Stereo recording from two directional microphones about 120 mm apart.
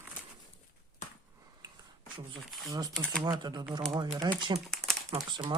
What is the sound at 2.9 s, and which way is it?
Speech, 5° left (ahead or behind).